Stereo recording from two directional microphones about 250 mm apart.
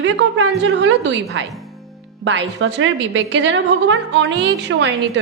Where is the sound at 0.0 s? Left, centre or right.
Right.